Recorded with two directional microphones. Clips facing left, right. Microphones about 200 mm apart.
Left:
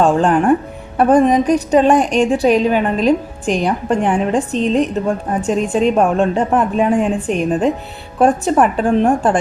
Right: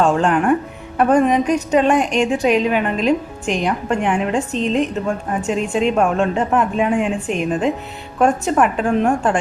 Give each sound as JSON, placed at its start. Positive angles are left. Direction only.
{"t": 0.0, "sound": "a woman's voice", "side_deg": 35}